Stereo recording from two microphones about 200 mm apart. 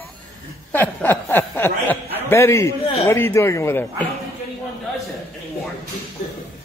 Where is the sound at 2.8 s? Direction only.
30° left (ahead or behind).